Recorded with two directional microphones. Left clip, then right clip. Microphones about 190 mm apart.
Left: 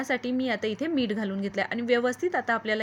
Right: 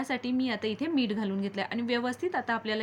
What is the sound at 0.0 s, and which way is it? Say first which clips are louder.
A woman's voice: left 3 dB; 25° left (ahead or behind).